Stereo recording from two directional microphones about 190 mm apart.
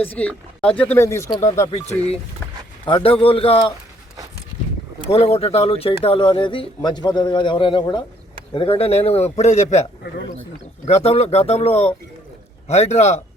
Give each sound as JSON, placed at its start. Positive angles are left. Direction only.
{"t": 0.2, "sound": "speech", "side_deg": 5}
{"t": 1.7, "sound": "a man's voice", "side_deg": 35}
{"t": 5.1, "sound": "a man's voice", "side_deg": 35}
{"t": 10.8, "sound": "a man's voice", "side_deg": 35}